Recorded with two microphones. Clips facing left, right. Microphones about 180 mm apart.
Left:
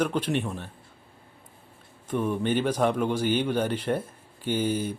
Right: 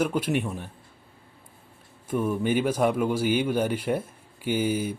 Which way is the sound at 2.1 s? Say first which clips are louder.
Right 1 dB; 10° right (ahead or behind).